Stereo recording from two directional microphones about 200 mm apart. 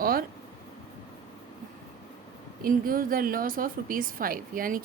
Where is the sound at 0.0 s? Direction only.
45° right (ahead or behind).